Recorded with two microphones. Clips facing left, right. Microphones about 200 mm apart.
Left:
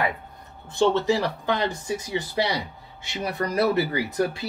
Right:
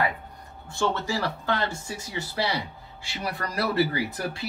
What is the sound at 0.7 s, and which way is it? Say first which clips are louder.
Speech: left 7 dB; 20° left (ahead or behind).